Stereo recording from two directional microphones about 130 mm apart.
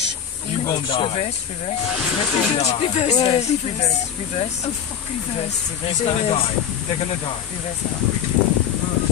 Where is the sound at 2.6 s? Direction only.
55° left (ahead or behind).